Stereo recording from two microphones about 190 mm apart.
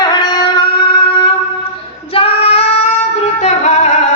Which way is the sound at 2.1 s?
30° left (ahead or behind).